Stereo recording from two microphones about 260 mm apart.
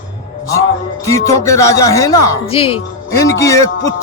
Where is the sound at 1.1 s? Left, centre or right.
Centre.